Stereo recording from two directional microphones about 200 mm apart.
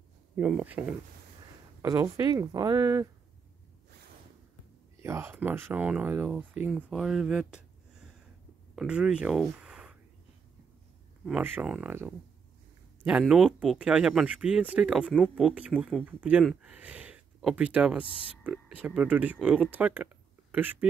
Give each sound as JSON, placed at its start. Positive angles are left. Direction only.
{"t": 0.4, "sound": "speech", "side_deg": -5}
{"t": 1.8, "sound": "speech", "side_deg": -15}
{"t": 5.0, "sound": "speech", "side_deg": -15}
{"t": 8.7, "sound": "speech", "side_deg": -5}
{"t": 11.2, "sound": "speech", "side_deg": -5}